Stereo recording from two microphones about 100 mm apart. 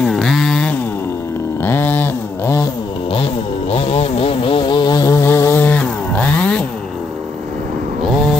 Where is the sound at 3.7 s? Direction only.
90° left; by 6.7 s 10° left (ahead or behind).